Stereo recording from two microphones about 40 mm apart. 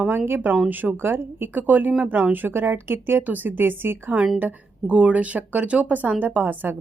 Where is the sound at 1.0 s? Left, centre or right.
Right.